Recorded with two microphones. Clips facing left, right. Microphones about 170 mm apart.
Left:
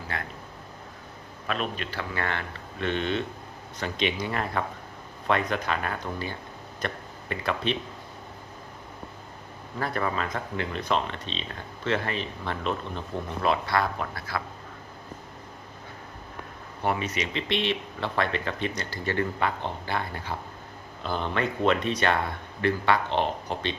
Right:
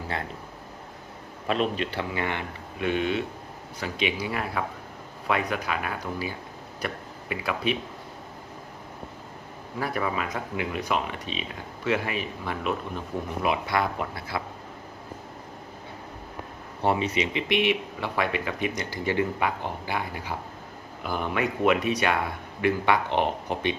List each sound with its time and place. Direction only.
1.5 s speech: 25° right (ahead or behind); by 7.8 s 10° right (ahead or behind)
9.7 s speech: 10° right (ahead or behind)
16.8 s speech: 25° right (ahead or behind)